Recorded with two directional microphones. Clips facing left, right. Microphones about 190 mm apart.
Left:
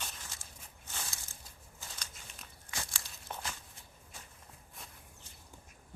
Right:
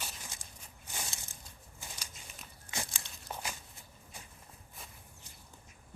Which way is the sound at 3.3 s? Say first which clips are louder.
Right 1 dB; 5° right (ahead or behind).